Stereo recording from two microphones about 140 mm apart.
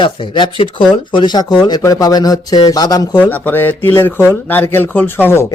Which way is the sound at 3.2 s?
10° left (ahead or behind).